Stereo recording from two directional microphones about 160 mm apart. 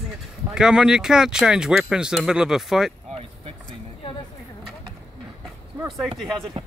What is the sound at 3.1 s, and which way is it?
Vehicle, 40° right (ahead or behind).